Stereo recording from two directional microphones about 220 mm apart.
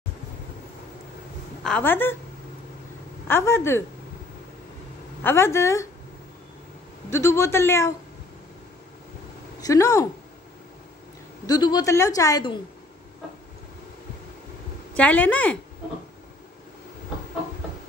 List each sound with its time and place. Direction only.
1.6 s a woman's voice: 5° left (ahead or behind)
3.3 s a woman's voice: 10° left (ahead or behind)
5.2 s a woman's voice: 10° left (ahead or behind)
7.1 s a woman's voice: 10° left (ahead or behind)
9.6 s a woman's voice: 15° left (ahead or behind)
11.4 s a woman's voice: 20° left (ahead or behind)
15.0 s a woman's voice: 5° left (ahead or behind)